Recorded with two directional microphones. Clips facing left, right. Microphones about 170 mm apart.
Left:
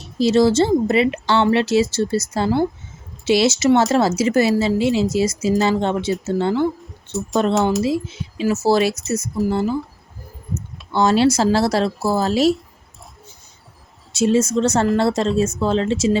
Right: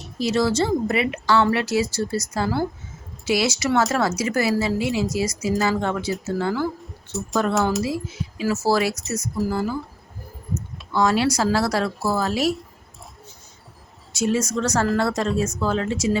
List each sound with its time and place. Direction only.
0.0 s speech: 30° left (ahead or behind)
7.1 s speech: centre (ahead or behind)
7.8 s speech: 25° left (ahead or behind)
10.9 s speech: 25° left (ahead or behind)
14.1 s speech: 25° left (ahead or behind)